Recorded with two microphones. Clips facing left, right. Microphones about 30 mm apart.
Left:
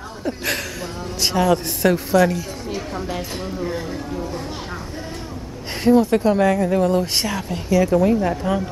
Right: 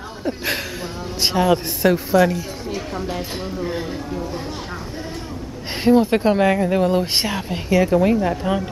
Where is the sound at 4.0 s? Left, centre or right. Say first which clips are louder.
Even; centre.